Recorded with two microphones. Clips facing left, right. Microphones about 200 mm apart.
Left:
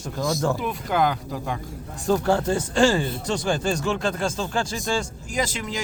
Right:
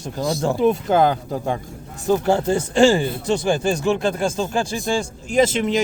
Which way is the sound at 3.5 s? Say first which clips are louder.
Right 5 dB; 10° right (ahead or behind).